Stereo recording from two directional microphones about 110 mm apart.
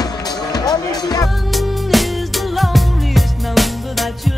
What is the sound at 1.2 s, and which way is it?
Music, centre (ahead or behind).